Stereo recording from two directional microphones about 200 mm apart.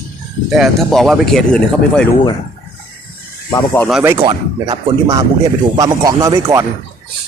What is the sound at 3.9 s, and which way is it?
Speech, 10° right (ahead or behind).